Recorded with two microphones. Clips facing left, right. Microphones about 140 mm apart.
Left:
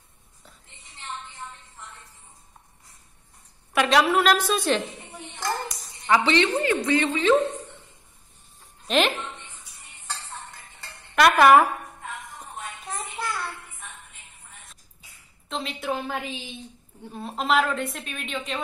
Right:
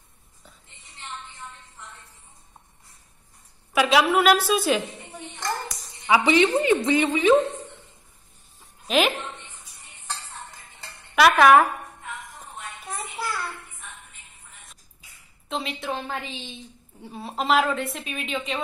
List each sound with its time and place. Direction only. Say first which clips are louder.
3.7 s a woman's voice: right 1 dB; 5° right (ahead or behind)
8.5 s a sound: right 1 dB; 5° right (ahead or behind)
11.1 s a sound: even; centre (ahead or behind)
12.8 s child singing: right 1 dB; 10° right (ahead or behind)
15.4 s a woman's voice: even; centre (ahead or behind)
17.0 s a woman's voice: right 1 dB; 5° right (ahead or behind)